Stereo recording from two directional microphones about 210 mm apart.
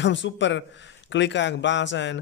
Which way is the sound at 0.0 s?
60° left (ahead or behind).